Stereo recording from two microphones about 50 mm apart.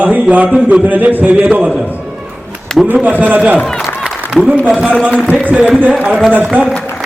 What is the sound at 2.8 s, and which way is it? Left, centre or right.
Speech, centre.